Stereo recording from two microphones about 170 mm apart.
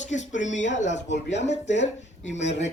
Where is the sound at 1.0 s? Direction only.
90° left.